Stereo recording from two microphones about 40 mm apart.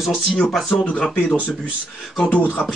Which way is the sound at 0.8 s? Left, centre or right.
Left.